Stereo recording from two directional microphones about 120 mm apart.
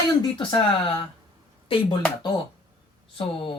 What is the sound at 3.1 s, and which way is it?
Speech, 50° left (ahead or behind).